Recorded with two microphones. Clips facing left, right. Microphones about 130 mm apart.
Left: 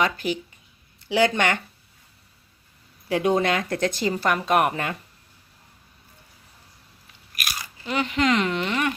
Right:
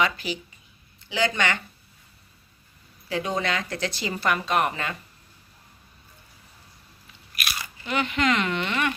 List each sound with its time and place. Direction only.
0.0 s speech: 50° left (ahead or behind)
1.0 s speech: 65° left (ahead or behind)
3.1 s speech: 55° left (ahead or behind)
7.3 s speech: 40° left (ahead or behind)